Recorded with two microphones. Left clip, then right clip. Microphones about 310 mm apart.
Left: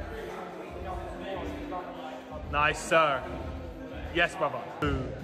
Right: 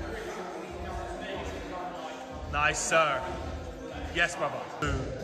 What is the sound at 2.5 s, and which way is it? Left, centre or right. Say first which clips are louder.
Speech: left 1 dB; centre.